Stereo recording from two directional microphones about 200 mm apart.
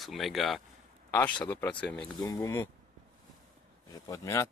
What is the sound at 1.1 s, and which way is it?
Speech, 10° left (ahead or behind).